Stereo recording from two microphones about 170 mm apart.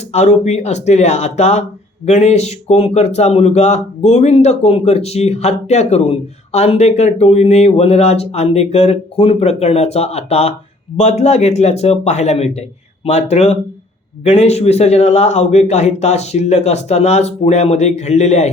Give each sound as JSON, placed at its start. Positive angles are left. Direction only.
{"t": 0.1, "sound": "speech", "side_deg": 40}